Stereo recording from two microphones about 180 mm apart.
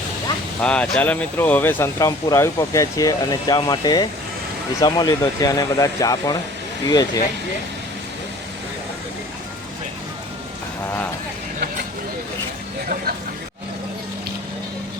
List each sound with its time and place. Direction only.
0.6 s speech: 5° left (ahead or behind); by 7.1 s 20° left (ahead or behind)